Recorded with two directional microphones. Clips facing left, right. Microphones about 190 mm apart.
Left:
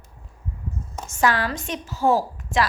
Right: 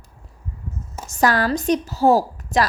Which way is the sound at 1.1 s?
40° right (ahead or behind).